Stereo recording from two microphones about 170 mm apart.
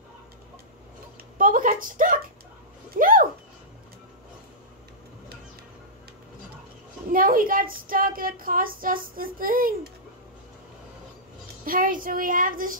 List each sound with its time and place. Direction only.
1.4 s a sound: 55° right (ahead or behind)
7.1 s speech: 55° right (ahead or behind)
11.6 s a woman's voice: 55° right (ahead or behind)